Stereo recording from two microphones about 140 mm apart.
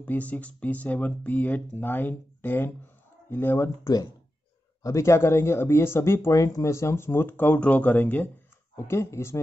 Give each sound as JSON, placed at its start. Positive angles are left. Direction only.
{"t": 0.0, "sound": "speech", "side_deg": 10}